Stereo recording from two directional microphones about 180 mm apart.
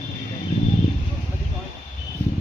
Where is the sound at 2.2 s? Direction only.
40° right (ahead or behind).